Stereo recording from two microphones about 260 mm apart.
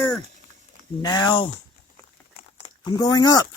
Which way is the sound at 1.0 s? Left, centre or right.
Centre.